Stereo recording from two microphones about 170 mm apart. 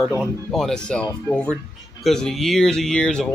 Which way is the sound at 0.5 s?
5° left (ahead or behind).